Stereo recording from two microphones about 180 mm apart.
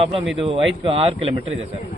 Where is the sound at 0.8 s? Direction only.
30° right (ahead or behind).